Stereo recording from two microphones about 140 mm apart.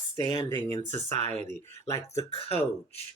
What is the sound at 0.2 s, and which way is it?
Speech, 35° left (ahead or behind).